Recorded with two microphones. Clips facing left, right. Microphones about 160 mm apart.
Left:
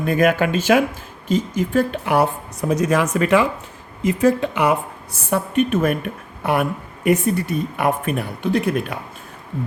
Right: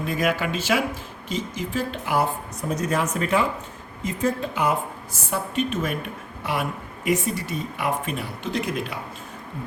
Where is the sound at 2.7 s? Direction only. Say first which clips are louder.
Left 6 dB; 90° left.